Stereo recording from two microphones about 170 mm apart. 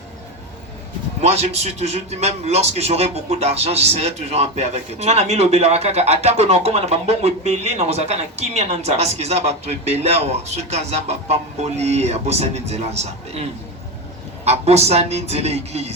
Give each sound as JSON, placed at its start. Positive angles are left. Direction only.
{"t": 1.2, "sound": "a man's voice", "side_deg": -40}